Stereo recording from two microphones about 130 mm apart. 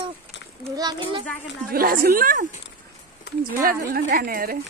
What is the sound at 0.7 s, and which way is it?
Speech, 30° right (ahead or behind).